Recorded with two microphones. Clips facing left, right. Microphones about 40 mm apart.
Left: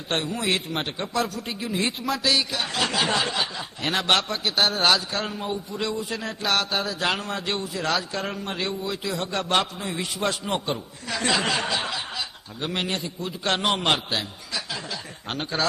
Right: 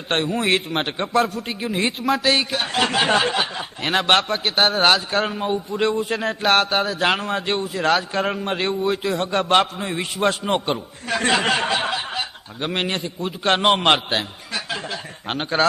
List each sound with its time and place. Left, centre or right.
0.1 s a man's voice: right